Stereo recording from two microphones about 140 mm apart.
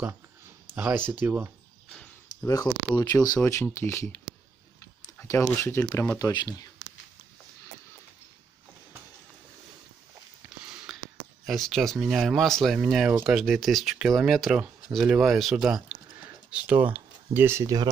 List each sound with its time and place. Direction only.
0.7 s speech: 15° right (ahead or behind)
2.4 s speech: 25° left (ahead or behind)
5.2 s speech: 15° left (ahead or behind)
10.9 s a sound: centre (ahead or behind)
11.4 s speech: centre (ahead or behind); by 17.8 s 20° right (ahead or behind)